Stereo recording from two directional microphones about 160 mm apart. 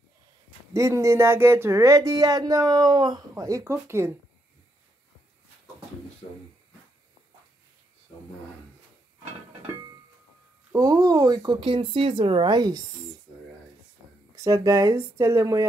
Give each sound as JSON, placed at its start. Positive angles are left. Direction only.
{"t": 0.7, "sound": "speech", "side_deg": -20}
{"t": 10.7, "sound": "speech", "side_deg": -25}
{"t": 14.3, "sound": "speech", "side_deg": -20}